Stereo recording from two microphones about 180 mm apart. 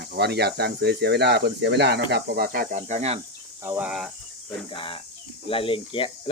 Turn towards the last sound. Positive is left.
turn(degrees=30)  # may be behind; listen again after turning